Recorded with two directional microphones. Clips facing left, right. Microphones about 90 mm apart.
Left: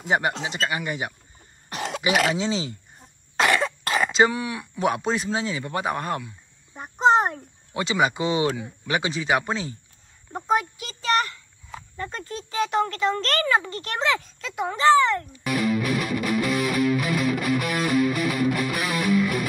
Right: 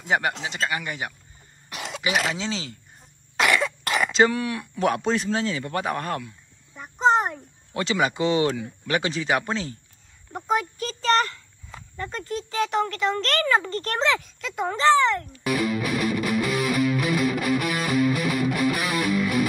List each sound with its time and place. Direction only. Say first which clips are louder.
0.6 s speech: left 1 dB; 20° left (ahead or behind)
1.7 s cough: left 4 dB; 45° left (ahead or behind)
2.3 s speech: left 4 dB; 15° left (ahead or behind)
3.3 s cough: left 1 dB; 30° left (ahead or behind)
4.1 s speech: right 2 dB; 10° left (ahead or behind)
6.7 s a child's voice: left 2 dB; 30° left (ahead or behind)
7.7 s speech: left 1 dB; 15° left (ahead or behind)
10.8 s speech: right 2 dB; 10° left (ahead or behind)
11.7 s speech: even; 20° left (ahead or behind)
15.4 s music: left 1 dB; centre (ahead or behind)